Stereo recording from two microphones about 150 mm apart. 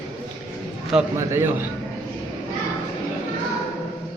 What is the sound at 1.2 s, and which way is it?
Speech, 20° right (ahead or behind).